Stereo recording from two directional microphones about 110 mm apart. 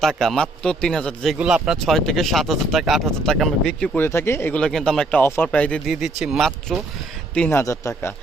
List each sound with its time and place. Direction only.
0.0 s speech: centre (ahead or behind)
1.4 s speech: 5° right (ahead or behind)
3.9 s speech: 20° left (ahead or behind)
4.6 s speech: 5° left (ahead or behind)
5.9 s speech: 5° right (ahead or behind)
7.5 s speech: 25° left (ahead or behind)